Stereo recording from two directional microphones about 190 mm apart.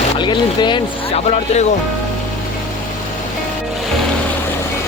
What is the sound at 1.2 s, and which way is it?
Speech, 35° left (ahead or behind).